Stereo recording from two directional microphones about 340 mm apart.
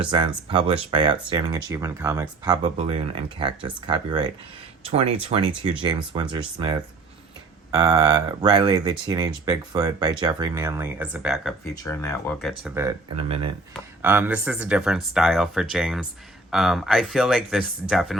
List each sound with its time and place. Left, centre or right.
0.0 s speech: centre
11.7 s speech: centre